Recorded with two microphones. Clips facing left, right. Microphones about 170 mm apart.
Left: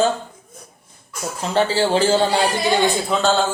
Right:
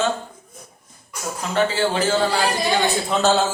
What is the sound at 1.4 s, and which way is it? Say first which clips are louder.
A woman's voice: left 2 dB; 30° left (ahead or behind).